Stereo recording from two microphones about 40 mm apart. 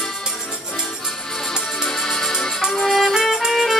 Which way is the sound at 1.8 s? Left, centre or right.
Centre.